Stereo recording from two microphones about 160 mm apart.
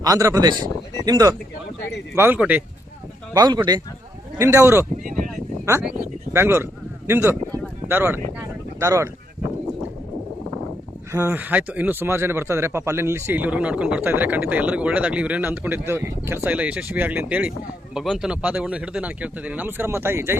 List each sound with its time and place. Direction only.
0.0 s speech: 20° right (ahead or behind)
3.3 s speech: 25° right (ahead or behind)
5.0 s a sound: 60° right (ahead or behind)
6.3 s speech: 15° right (ahead or behind)
11.1 s speech: 15° right (ahead or behind)